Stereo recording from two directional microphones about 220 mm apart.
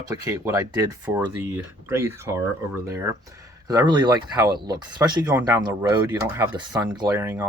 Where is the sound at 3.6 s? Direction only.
20° right (ahead or behind).